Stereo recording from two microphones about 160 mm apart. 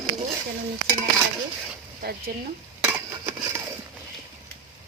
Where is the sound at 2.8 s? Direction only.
10° right (ahead or behind).